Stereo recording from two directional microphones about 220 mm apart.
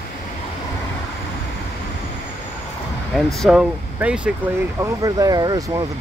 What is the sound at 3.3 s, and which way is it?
Speech, centre (ahead or behind).